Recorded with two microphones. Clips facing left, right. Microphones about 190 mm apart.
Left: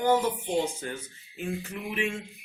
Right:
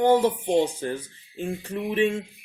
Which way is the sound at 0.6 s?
30° right (ahead or behind).